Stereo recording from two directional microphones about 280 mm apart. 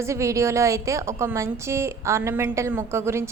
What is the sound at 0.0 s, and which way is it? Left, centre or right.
A woman's voice, centre.